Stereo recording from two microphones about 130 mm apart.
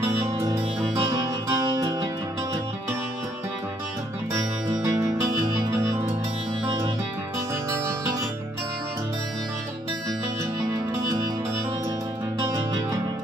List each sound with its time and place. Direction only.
1.1 s music: 30° right (ahead or behind)
4.3 s music: 25° right (ahead or behind)